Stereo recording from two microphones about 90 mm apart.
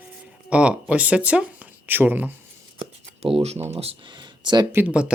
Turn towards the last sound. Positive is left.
turn(degrees=-10)  # may be behind; listen again after turning